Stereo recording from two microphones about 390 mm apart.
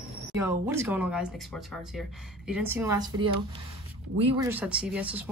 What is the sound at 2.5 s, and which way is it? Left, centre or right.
Speech, centre.